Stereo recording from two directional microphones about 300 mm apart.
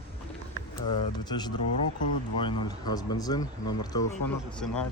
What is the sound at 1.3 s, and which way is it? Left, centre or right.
Speech, centre.